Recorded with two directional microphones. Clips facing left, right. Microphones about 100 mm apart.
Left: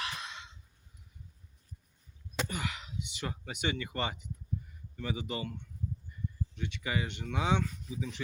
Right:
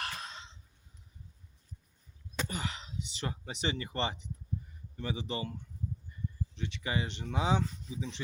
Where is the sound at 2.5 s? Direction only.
35° right (ahead or behind).